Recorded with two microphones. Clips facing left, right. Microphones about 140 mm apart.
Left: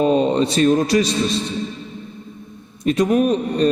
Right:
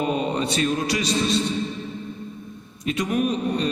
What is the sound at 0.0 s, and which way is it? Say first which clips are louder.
Speech: left 8 dB; 30° left (ahead or behind).